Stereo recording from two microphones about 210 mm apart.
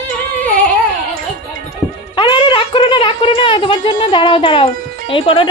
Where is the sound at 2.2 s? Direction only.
25° left (ahead or behind).